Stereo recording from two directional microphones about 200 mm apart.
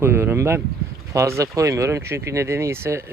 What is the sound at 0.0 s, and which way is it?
Speech, 10° right (ahead or behind).